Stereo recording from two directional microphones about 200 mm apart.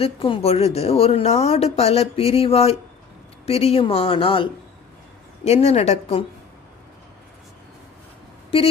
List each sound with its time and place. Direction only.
0.0 s speech: 25° left (ahead or behind)
5.5 s speech: 30° left (ahead or behind)
8.4 s speech: 30° left (ahead or behind)